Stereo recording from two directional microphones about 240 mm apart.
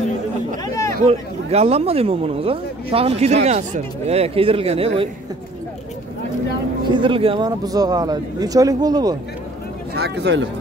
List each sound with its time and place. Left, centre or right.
1.0 s speech: right
6.9 s speech: right
9.9 s speech: right